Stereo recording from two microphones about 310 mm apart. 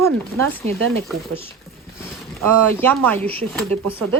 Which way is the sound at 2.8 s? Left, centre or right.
Centre.